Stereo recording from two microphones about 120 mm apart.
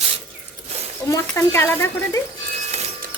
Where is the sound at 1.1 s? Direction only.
20° left (ahead or behind).